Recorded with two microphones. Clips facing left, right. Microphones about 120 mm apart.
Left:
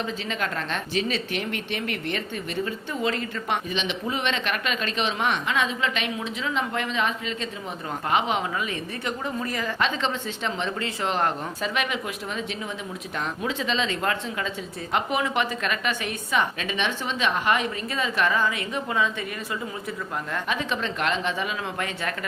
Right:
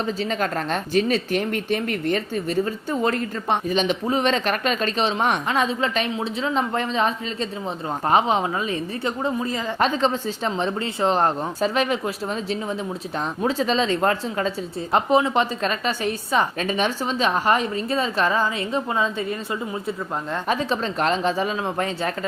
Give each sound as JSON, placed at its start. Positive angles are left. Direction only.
{"t": 0.0, "sound": "speech", "side_deg": -40}
{"t": 9.7, "sound": "speech", "side_deg": -40}
{"t": 20.3, "sound": "speech", "side_deg": -35}